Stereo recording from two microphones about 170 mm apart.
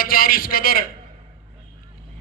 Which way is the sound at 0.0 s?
60° left (ahead or behind).